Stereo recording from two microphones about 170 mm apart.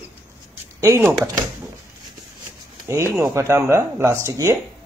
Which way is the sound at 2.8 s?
15° right (ahead or behind).